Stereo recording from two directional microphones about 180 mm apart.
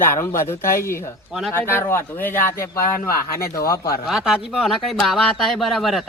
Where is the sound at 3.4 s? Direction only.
55° left (ahead or behind).